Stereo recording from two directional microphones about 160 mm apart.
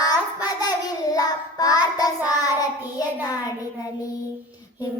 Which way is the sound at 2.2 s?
25° left (ahead or behind).